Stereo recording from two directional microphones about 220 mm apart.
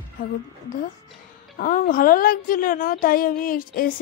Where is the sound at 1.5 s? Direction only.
35° left (ahead or behind).